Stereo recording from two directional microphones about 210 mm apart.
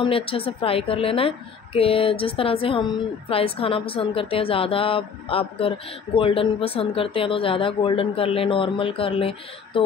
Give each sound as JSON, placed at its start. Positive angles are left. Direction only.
{"t": 0.0, "sound": "a woman's voice", "side_deg": 25}